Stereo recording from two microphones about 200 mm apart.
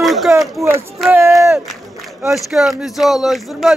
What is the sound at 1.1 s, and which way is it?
Speech, 15° right (ahead or behind).